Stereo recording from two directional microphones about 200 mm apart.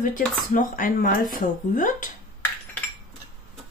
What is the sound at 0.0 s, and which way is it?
Speech, 40° left (ahead or behind).